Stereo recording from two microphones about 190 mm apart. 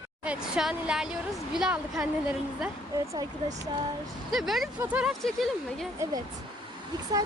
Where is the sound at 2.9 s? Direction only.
20° right (ahead or behind).